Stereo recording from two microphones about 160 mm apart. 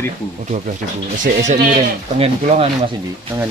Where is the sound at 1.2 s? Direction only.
50° right (ahead or behind).